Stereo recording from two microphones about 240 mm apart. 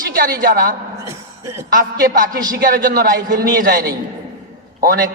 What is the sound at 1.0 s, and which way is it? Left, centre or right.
Music, centre.